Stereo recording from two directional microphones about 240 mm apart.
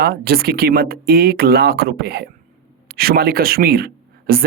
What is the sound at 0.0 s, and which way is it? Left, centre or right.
Speech, right.